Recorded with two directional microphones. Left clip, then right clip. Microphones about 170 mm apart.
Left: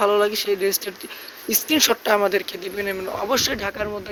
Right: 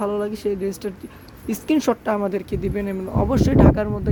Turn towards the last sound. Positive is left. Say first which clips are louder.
# right 6 dB
turn(degrees=-20)  # may be behind; listen again after turning